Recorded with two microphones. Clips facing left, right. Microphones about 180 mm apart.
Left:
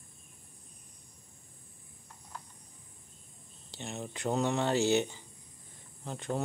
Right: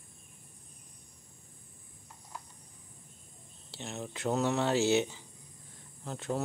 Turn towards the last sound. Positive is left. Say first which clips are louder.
# even
turn(degrees=0)  # may be behind; listen again after turning